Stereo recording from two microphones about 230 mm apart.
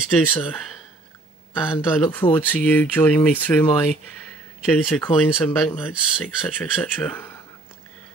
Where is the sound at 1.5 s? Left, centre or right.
Centre.